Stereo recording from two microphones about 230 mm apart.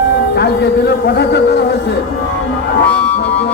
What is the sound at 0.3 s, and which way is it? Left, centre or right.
A man's voice, left.